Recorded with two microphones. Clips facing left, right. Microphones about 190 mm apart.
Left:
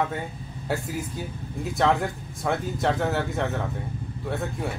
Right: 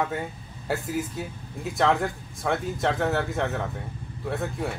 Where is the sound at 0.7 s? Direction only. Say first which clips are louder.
Right 1 dB; centre (ahead or behind).